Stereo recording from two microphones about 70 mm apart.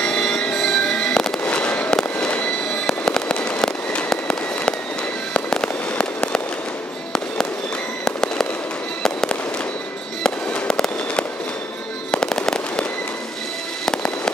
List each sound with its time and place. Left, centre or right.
0.0 s fireworks: centre
5.3 s fireworks: centre
8.0 s fireworks: centre